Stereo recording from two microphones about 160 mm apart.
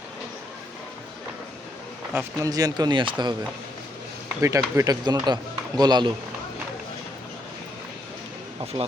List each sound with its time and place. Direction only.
2.1 s a man's voice: 20° right (ahead or behind)
4.4 s a man's voice: 15° right (ahead or behind)
8.7 s a man's voice: 25° right (ahead or behind)